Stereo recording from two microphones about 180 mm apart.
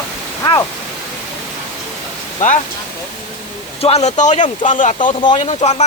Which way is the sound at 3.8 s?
35° left (ahead or behind).